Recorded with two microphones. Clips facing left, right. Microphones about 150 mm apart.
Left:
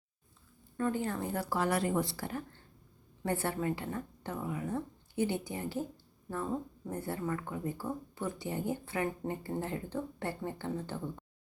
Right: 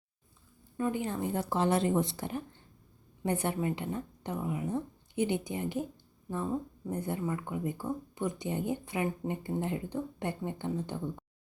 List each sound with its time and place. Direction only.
0.8 s a woman's voice: 15° right (ahead or behind)
6.9 s speech: 20° right (ahead or behind)